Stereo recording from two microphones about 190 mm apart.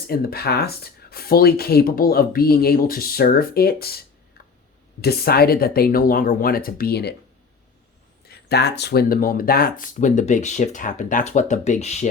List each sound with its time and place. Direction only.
0.1 s speech: 50° left (ahead or behind)
8.3 s speech: 60° left (ahead or behind); by 12.0 s 35° left (ahead or behind)